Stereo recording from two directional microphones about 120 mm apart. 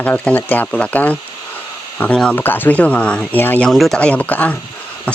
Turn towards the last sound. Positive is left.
turn(degrees=10)  # may be behind; listen again after turning